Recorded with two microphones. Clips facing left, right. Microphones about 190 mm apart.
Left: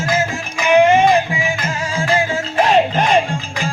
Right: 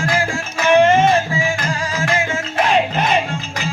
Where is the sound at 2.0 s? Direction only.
35° left (ahead or behind).